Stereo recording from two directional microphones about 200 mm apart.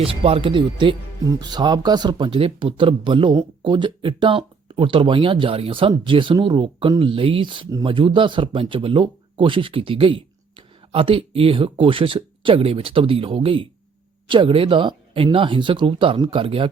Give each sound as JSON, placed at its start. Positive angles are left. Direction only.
{"t": 0.0, "sound": "speech", "side_deg": -25}